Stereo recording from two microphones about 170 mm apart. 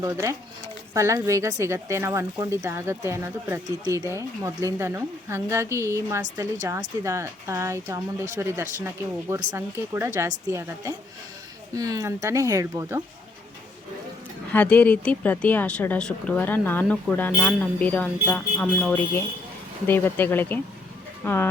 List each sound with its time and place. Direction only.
0.0 s speech: 15° right (ahead or behind)
14.5 s speech: 10° left (ahead or behind)